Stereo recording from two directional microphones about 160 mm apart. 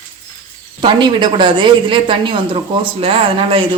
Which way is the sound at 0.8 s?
30° right (ahead or behind).